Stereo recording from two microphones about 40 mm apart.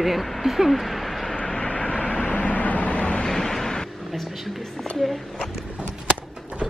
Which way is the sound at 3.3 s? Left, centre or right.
Centre.